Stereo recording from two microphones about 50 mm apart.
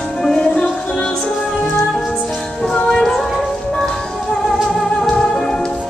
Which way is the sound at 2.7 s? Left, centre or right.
Centre.